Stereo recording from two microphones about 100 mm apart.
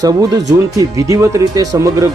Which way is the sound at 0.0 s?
40° right (ahead or behind).